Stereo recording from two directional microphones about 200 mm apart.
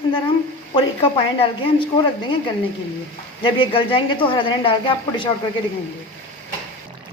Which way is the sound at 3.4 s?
25° left (ahead or behind).